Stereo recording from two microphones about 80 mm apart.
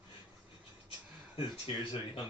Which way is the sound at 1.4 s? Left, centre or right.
Left.